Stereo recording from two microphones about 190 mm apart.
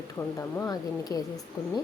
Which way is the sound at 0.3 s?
15° left (ahead or behind).